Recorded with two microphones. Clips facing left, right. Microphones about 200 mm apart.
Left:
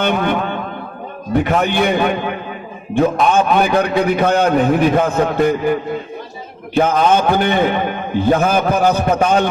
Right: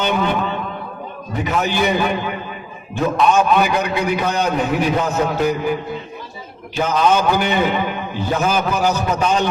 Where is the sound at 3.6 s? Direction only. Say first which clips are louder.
Left 4 dB; 55° left (ahead or behind).